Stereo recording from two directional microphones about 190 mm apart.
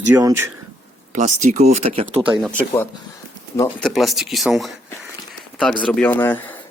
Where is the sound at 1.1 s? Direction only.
40° right (ahead or behind).